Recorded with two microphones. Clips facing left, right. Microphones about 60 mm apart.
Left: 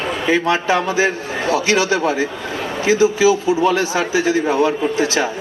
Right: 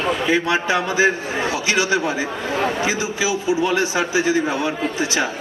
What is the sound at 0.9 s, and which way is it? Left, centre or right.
Speech, right.